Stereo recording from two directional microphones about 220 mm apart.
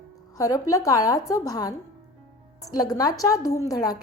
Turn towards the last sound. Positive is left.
turn(degrees=15)  # may be behind; listen again after turning